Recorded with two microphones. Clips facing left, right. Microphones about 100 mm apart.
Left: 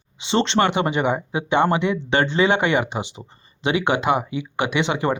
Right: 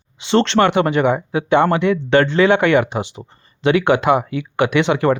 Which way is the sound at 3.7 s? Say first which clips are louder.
Right 5 dB; 55° right (ahead or behind).